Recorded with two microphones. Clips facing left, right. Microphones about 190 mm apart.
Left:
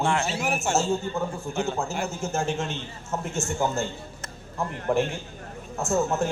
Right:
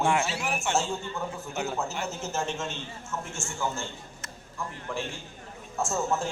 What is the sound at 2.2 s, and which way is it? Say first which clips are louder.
Speech: left 5 dB; 55° left (ahead or behind).